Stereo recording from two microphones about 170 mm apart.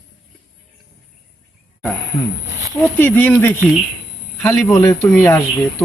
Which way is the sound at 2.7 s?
10° left (ahead or behind).